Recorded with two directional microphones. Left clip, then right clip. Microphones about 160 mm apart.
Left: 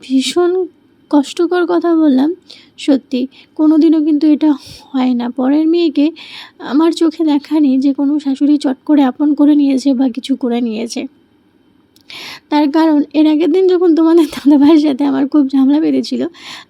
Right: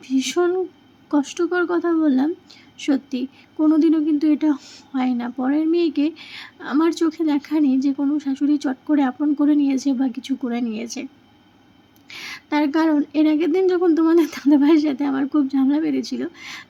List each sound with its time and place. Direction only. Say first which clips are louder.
0.0 s a woman's voice: left 7 dB; 30° left (ahead or behind)